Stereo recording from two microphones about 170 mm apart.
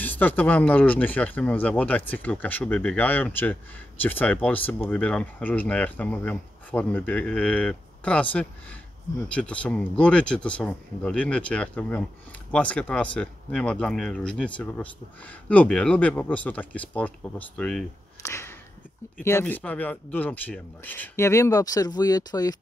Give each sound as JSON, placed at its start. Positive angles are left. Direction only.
{"t": 0.0, "sound": "speech", "side_deg": 10}
{"t": 18.2, "sound": "a sound", "side_deg": 15}
{"t": 19.1, "sound": "speech", "side_deg": 10}